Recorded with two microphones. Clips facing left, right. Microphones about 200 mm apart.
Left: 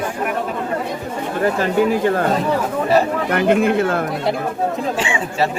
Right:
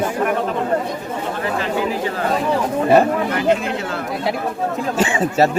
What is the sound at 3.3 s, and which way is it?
Speech, 55° left (ahead or behind).